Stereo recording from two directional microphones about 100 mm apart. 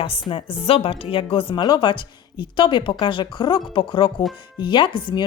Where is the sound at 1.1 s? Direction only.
65° left (ahead or behind).